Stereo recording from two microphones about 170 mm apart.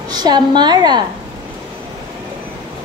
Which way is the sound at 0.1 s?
25° right (ahead or behind).